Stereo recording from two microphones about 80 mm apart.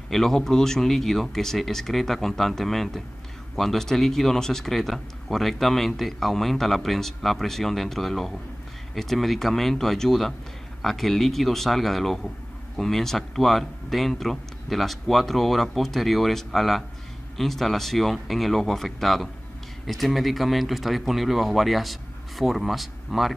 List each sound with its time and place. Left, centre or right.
0.1 s speech: centre